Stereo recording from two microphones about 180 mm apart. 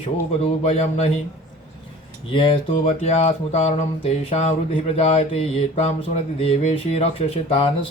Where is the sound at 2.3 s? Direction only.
30° left (ahead or behind).